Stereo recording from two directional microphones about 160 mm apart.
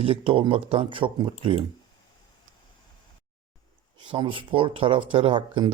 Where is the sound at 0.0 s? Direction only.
35° right (ahead or behind).